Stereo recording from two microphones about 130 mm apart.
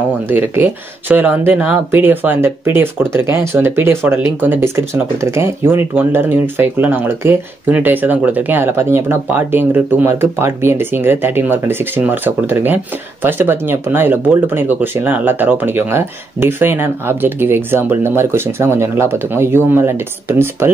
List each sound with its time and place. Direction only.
0.3 s speech: 15° right (ahead or behind)